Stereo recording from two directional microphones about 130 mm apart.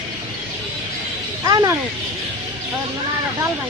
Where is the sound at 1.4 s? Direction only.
25° right (ahead or behind).